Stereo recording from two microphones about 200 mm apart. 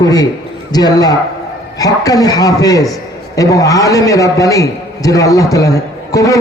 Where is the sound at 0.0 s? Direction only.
20° left (ahead or behind).